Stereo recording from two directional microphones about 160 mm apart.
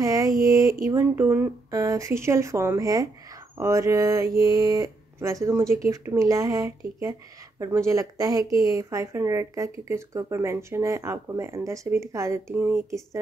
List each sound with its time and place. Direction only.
0.0 s mantra: 20° right (ahead or behind)
0.8 s a woman's voice: 15° right (ahead or behind)